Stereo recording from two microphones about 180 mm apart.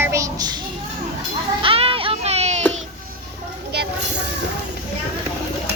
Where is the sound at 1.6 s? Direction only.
30° right (ahead or behind).